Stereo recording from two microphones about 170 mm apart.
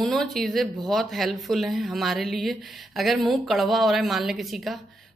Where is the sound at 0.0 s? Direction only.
Centre (ahead or behind).